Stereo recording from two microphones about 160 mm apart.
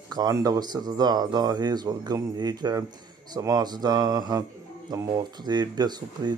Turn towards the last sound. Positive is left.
turn(degrees=-25)  # may be behind; listen again after turning